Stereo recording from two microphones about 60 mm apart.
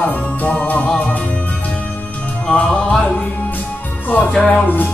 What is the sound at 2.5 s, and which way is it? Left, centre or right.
Music, centre.